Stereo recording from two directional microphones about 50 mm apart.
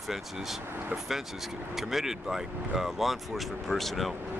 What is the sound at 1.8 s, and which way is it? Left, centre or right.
Speech, centre.